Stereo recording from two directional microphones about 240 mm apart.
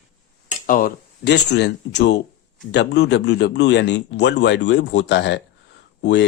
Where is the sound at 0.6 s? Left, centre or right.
Left.